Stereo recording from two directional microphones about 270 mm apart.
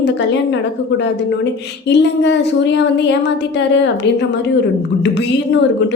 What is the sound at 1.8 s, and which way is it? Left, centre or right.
A woman's voice, left.